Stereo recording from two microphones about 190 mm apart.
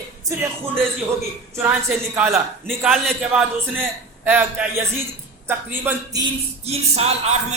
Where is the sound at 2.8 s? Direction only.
Centre (ahead or behind).